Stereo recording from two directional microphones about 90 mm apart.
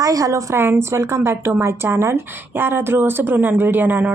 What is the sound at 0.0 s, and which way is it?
A woman's voice, 40° right (ahead or behind).